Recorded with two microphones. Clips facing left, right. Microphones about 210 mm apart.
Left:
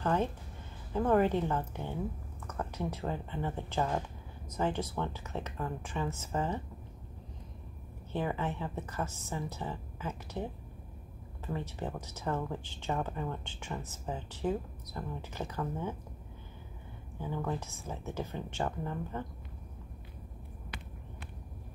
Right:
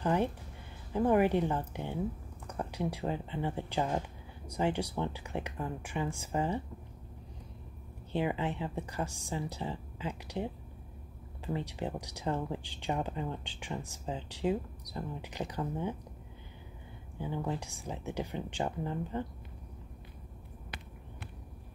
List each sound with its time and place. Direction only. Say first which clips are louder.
0.0 s speech: right 1 dB; 15° right (ahead or behind)
8.1 s speech: right 2 dB; 15° right (ahead or behind)
17.2 s speech: even; 15° right (ahead or behind)